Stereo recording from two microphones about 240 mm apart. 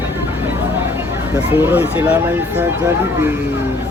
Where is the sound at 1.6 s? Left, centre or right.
Centre.